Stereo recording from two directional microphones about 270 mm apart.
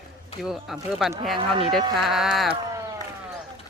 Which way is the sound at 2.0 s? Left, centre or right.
Centre.